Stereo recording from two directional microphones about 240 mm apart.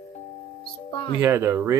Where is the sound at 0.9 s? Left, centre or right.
Left.